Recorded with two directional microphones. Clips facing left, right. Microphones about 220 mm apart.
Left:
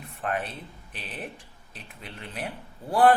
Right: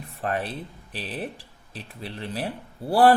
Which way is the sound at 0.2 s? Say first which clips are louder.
Right 3 dB; 35° right (ahead or behind).